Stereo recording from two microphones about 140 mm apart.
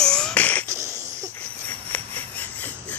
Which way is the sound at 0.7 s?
20° right (ahead or behind).